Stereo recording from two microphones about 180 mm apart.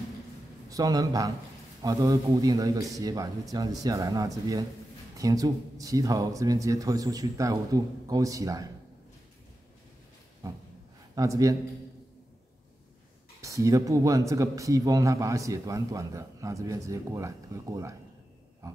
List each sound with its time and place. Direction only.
0.7 s speech: 20° right (ahead or behind)
11.1 s speech: 20° right (ahead or behind)
13.4 s speech: 15° right (ahead or behind)